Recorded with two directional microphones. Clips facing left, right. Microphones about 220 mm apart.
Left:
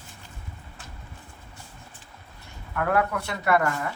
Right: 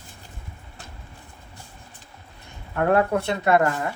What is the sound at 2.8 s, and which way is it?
Speech, 30° right (ahead or behind).